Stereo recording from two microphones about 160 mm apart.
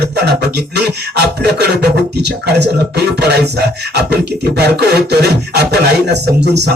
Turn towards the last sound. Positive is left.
turn(degrees=-90)